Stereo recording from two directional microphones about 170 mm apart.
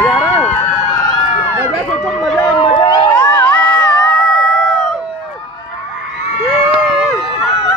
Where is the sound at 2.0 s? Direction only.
Centre (ahead or behind).